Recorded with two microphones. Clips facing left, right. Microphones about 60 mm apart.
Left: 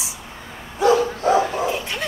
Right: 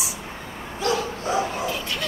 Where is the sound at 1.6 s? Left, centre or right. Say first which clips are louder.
Left 3 dB; left.